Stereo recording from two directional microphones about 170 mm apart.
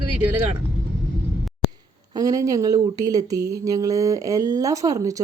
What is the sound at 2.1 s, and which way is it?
Speech, 20° right (ahead or behind).